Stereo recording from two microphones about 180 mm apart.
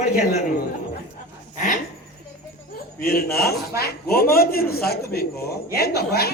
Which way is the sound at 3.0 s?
55° left (ahead or behind).